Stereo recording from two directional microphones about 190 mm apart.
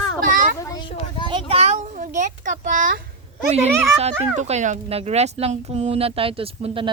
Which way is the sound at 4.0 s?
35° right (ahead or behind).